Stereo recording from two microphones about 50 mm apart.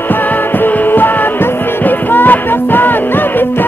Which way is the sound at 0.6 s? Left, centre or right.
Left.